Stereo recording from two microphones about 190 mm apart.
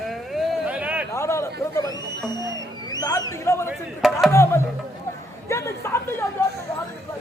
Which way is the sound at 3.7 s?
Centre (ahead or behind).